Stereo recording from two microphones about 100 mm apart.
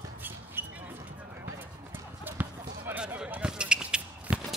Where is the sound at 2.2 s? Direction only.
15° right (ahead or behind).